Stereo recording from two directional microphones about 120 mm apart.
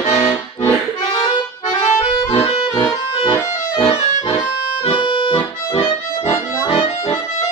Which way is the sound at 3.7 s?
50° left (ahead or behind).